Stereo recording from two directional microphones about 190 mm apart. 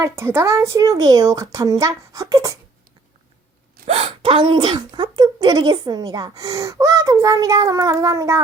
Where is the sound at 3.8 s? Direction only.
30° right (ahead or behind).